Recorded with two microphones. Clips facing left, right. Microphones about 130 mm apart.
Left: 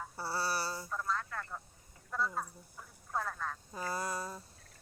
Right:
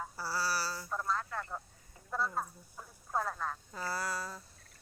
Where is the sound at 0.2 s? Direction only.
25° left (ahead or behind).